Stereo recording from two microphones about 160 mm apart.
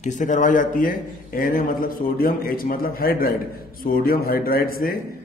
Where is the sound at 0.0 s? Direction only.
50° left (ahead or behind).